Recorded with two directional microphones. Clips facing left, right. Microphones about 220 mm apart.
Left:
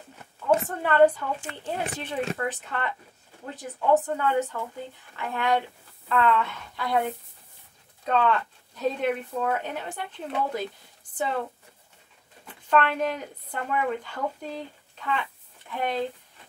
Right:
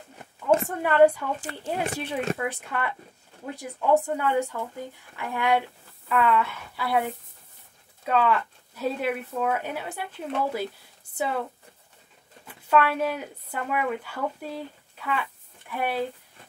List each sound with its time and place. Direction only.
0.7 s speech: 10° right (ahead or behind)
1.4 s speech: 35° right (ahead or behind)
2.0 s speech: 10° right (ahead or behind)
12.6 s speech: 5° right (ahead or behind)